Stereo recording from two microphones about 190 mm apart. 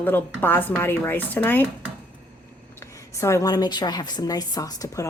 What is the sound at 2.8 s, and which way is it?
A woman's voice, 15° left (ahead or behind).